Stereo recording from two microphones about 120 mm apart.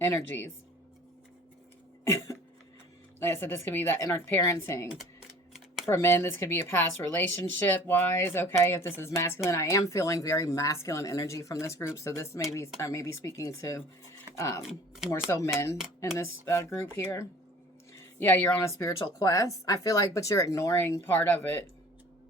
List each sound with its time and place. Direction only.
0.0 s speech: 20° left (ahead or behind)
2.0 s a sound: 25° left (ahead or behind)
3.2 s speech: 20° left (ahead or behind)
5.5 s camera: 5° right (ahead or behind)
5.9 s speech: 20° left (ahead or behind)
14.6 s speech: 5° right (ahead or behind)
15.3 s speech: 20° left (ahead or behind)